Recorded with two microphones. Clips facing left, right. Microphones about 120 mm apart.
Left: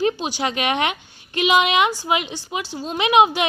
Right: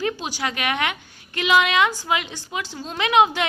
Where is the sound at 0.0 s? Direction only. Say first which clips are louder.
Left 4 dB; 20° left (ahead or behind).